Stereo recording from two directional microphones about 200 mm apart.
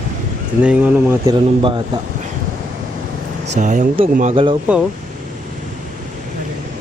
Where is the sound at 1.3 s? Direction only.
20° right (ahead or behind).